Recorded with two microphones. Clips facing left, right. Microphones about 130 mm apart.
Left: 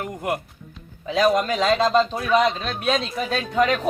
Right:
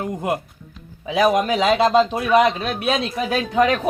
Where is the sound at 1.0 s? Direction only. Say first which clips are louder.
Right 2 dB; 10° right (ahead or behind).